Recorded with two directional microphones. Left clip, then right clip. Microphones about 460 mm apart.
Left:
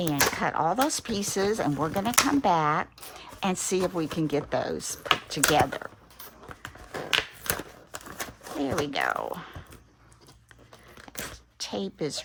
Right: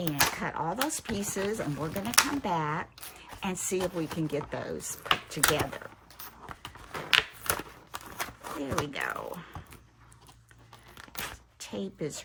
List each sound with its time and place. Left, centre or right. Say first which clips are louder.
0.1 s speech: left 2 dB; centre
6.9 s a sound: right 1 dB; centre
11.6 s speech: left 5 dB; centre